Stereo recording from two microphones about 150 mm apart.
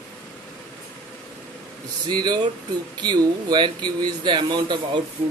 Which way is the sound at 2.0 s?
30° right (ahead or behind).